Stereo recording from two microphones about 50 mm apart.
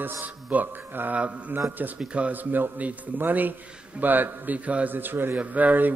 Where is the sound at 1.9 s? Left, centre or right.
Right.